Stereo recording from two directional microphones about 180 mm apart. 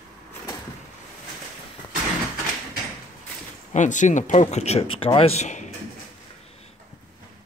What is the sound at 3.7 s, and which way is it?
Speech, 45° left (ahead or behind).